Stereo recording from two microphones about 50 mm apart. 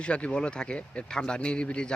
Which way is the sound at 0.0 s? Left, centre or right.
Left.